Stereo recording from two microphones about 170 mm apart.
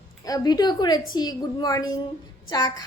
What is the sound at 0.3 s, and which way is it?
A woman's voice, 20° left (ahead or behind).